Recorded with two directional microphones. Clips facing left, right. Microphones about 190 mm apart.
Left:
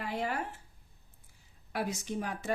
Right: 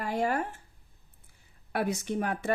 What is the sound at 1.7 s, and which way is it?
Speech, 60° right (ahead or behind).